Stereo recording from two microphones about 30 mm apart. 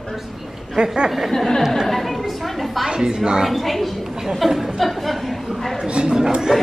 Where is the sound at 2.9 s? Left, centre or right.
Right.